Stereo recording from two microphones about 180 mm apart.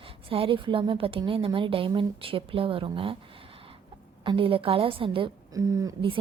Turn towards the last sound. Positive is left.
turn(degrees=-25)  # may be behind; listen again after turning